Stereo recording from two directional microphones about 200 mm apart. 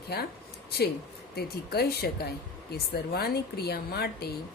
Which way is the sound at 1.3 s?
50° left (ahead or behind).